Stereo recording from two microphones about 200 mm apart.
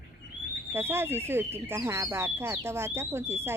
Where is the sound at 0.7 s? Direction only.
10° right (ahead or behind).